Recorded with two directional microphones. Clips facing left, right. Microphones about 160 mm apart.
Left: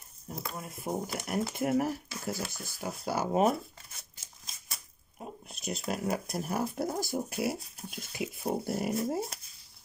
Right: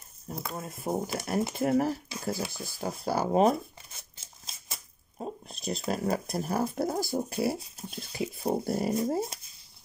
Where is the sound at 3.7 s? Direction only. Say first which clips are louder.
Right 2 dB; 25° right (ahead or behind).